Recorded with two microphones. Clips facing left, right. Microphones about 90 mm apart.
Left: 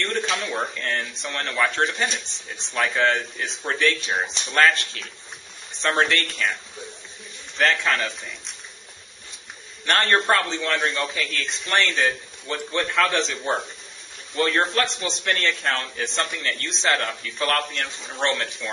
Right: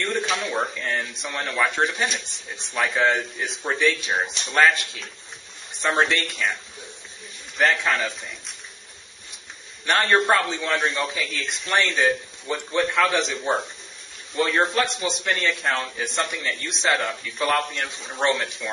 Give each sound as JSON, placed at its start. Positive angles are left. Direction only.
{"t": 0.0, "sound": "a sound", "side_deg": -10}
{"t": 0.6, "sound": "a man's voice", "side_deg": -5}
{"t": 9.8, "sound": "speech", "side_deg": -5}
{"t": 11.3, "sound": "a man's voice", "side_deg": -15}
{"t": 11.7, "sound": "a man's voice", "side_deg": -5}
{"t": 18.1, "sound": "a man's voice", "side_deg": -15}